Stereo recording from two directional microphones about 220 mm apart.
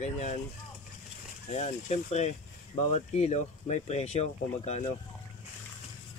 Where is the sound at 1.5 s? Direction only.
30° left (ahead or behind).